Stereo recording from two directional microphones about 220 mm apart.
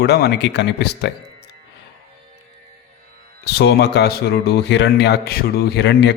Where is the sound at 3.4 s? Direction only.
50° left (ahead or behind).